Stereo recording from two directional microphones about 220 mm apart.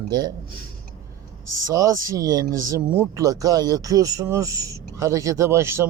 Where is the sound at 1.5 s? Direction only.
15° right (ahead or behind).